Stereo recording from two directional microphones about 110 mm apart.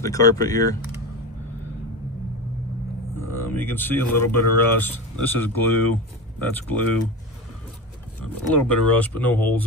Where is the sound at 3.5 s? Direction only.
15° left (ahead or behind).